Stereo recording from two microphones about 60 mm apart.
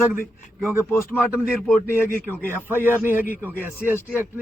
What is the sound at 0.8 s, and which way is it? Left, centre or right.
Speech, left.